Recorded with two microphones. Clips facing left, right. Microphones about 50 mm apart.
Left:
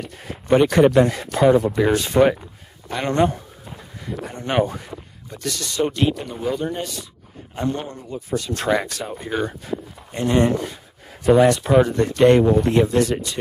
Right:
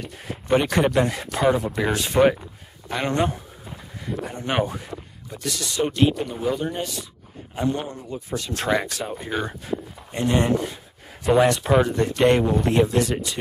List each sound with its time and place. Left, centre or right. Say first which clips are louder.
0.6 s speech: left 6 dB; centre
8.3 s speech: left 4 dB; centre
9.0 s speech: left 2 dB; centre